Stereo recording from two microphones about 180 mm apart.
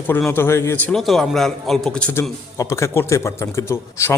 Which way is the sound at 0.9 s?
Centre (ahead or behind).